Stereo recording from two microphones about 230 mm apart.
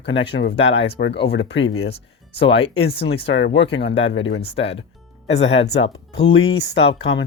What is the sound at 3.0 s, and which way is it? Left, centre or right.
Speech, left.